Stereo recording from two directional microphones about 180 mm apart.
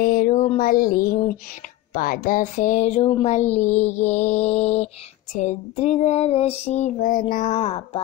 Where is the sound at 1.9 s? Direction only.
50° left (ahead or behind).